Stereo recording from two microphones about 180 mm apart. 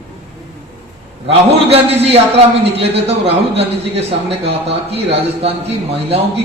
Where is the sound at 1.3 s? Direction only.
35° right (ahead or behind).